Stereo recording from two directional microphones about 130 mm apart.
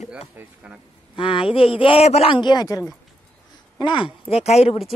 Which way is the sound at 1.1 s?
45° left (ahead or behind).